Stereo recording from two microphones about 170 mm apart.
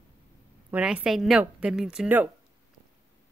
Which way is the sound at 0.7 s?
10° right (ahead or behind).